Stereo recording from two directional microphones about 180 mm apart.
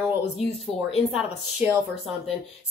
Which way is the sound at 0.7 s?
35° left (ahead or behind).